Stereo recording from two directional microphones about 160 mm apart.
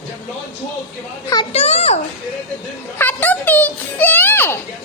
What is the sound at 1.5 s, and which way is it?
Speech, 40° left (ahead or behind).